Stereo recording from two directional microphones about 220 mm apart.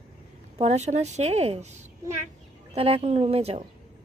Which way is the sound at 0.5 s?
30° right (ahead or behind).